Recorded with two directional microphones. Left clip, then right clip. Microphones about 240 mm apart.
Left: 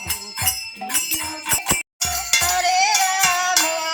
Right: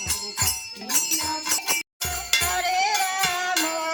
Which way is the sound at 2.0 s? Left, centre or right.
Centre.